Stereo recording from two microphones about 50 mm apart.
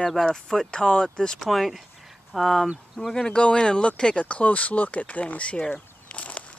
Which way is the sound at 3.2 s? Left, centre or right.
Centre.